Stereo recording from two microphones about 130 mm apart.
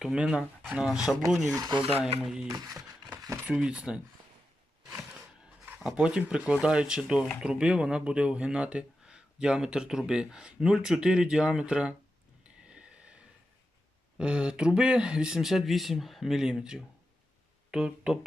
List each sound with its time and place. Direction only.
0.0 s speech: 5° right (ahead or behind)
1.5 s speech: 30° right (ahead or behind)
2.2 s speech: 5° right (ahead or behind)
2.5 s speech: 25° right (ahead or behind)
3.2 s a sound: 25° right (ahead or behind)
3.4 s speech: 5° right (ahead or behind)
4.9 s a sound: 5° right (ahead or behind)
5.8 s speech: 5° right (ahead or behind)
12.6 s a sound: 5° right (ahead or behind)
14.2 s speech: 10° right (ahead or behind)